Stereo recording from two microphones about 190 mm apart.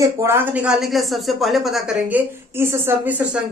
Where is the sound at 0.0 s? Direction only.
15° right (ahead or behind).